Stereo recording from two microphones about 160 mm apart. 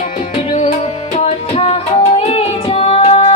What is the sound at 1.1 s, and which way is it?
Music, 40° left (ahead or behind).